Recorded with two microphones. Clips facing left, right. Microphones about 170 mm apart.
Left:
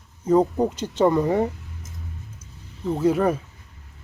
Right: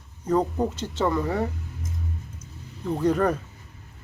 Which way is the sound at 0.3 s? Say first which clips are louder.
Left 4 dB; 10° left (ahead or behind).